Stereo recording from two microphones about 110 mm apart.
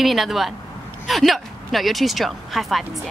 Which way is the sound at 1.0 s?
Centre (ahead or behind).